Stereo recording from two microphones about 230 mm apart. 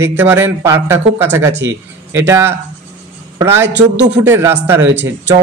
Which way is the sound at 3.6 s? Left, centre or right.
Right.